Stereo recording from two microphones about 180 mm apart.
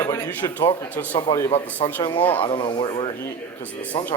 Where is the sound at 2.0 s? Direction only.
25° left (ahead or behind).